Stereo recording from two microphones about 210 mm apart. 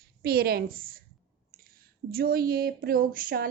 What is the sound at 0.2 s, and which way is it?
Speech, 45° right (ahead or behind).